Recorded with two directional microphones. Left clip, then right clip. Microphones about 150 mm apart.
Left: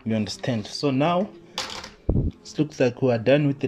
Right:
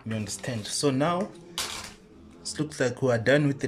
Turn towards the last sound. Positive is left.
turn(degrees=5)  # may be behind; listen again after turning